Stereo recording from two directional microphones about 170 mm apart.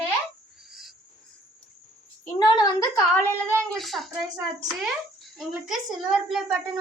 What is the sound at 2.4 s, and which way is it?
Speech, 25° left (ahead or behind).